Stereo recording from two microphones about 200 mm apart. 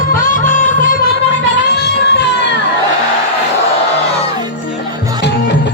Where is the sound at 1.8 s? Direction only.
55° left (ahead or behind).